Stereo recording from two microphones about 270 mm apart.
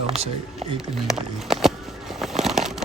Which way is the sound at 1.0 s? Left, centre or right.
Centre.